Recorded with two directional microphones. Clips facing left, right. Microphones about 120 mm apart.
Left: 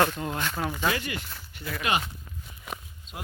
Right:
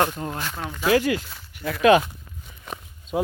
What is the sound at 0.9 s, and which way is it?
Speech, 85° right.